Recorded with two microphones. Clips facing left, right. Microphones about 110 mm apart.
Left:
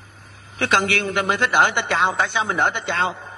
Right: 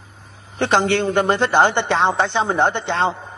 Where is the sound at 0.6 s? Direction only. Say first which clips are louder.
Right 4 dB; 15° right (ahead or behind).